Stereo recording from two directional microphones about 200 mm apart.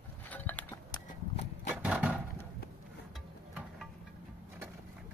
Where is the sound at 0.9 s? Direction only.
30° left (ahead or behind).